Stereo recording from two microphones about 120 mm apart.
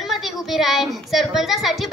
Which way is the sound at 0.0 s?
Centre (ahead or behind).